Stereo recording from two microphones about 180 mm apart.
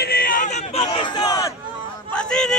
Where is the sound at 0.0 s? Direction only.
55° left (ahead or behind).